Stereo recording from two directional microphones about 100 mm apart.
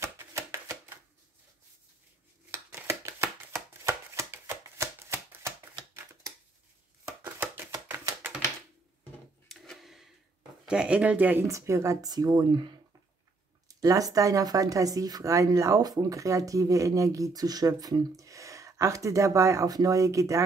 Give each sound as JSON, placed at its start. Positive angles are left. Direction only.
{"t": 0.0, "sound": "chopping", "side_deg": -30}
{"t": 2.5, "sound": "chopping", "side_deg": -25}
{"t": 7.2, "sound": "chopping", "side_deg": -20}
{"t": 9.5, "sound": "a sound", "side_deg": 0}
{"t": 10.6, "sound": "speech", "side_deg": -10}
{"t": 11.4, "sound": "speech", "side_deg": -30}
{"t": 13.7, "sound": "speech", "side_deg": -35}